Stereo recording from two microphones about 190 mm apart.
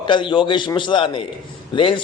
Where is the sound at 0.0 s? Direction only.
25° left (ahead or behind).